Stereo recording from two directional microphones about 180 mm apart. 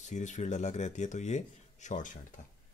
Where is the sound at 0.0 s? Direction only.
40° left (ahead or behind).